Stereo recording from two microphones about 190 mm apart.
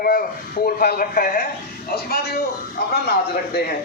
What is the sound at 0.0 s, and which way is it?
A man's voice, 50° left (ahead or behind).